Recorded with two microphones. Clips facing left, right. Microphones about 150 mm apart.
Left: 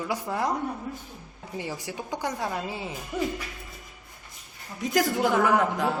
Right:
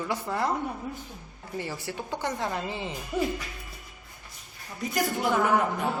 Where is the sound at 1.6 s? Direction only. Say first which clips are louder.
Even; 15° left (ahead or behind).